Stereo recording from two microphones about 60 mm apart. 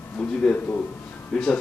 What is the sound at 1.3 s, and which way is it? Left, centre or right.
Speech, centre.